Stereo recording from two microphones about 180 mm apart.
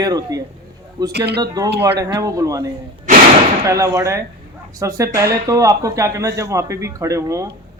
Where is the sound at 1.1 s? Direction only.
65° right (ahead or behind).